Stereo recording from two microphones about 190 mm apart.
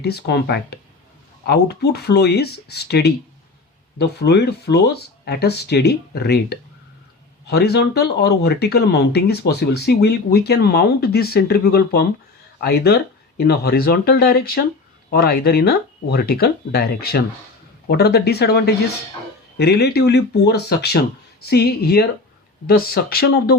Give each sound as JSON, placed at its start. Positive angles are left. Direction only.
{"t": 0.0, "sound": "speech", "side_deg": 60}